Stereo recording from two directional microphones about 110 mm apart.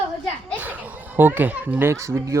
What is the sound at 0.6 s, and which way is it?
A child's voice, 15° right (ahead or behind).